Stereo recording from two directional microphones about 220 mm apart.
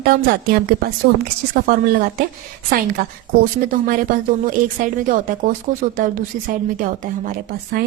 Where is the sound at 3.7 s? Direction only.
40° right (ahead or behind).